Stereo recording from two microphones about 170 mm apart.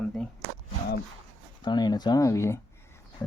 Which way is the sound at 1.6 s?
25° left (ahead or behind).